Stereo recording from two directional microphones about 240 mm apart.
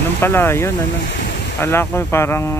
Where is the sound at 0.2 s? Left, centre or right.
Centre.